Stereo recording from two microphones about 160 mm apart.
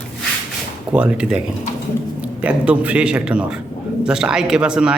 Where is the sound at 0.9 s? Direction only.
5° right (ahead or behind).